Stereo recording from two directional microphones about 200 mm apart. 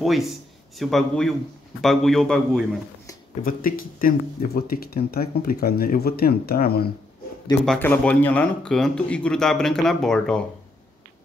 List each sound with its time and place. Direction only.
0.0 s speech: centre (ahead or behind)
3.4 s speech: 45° left (ahead or behind)
7.6 s speech: 5° left (ahead or behind)